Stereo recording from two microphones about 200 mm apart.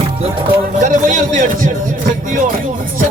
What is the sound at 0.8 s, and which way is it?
Speech, 40° right (ahead or behind).